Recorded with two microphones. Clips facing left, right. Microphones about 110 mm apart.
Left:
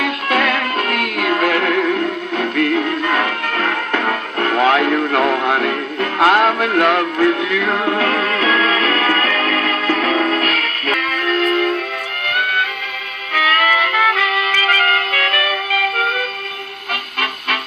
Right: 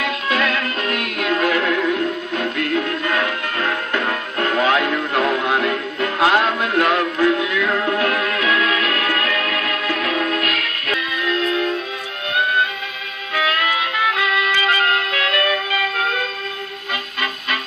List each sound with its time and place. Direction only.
0.0 s music: 50° left (ahead or behind)
10.9 s music: 50° left (ahead or behind)
13.3 s music: 60° left (ahead or behind)